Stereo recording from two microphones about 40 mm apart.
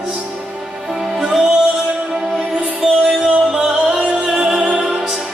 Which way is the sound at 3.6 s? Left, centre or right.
Centre.